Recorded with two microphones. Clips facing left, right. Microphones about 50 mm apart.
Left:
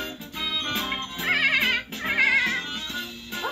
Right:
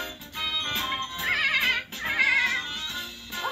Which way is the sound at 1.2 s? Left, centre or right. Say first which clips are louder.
Left 3 dB; left.